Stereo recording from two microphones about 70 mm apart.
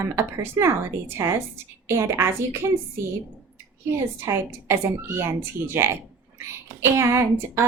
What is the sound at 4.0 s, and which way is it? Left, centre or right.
A woman's voice, right.